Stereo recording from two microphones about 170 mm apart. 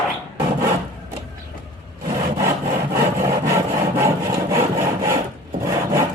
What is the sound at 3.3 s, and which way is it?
Wood, 15° right (ahead or behind).